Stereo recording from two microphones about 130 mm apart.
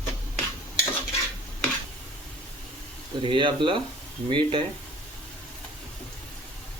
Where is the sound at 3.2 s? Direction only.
40° right (ahead or behind).